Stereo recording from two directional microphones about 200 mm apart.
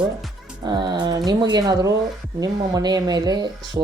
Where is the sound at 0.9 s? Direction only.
20° right (ahead or behind).